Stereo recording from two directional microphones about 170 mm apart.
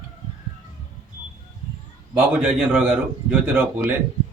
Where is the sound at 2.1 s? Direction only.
5° right (ahead or behind).